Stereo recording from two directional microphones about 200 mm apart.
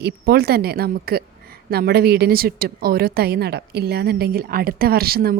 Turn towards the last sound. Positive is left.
turn(degrees=-50)  # may be behind; listen again after turning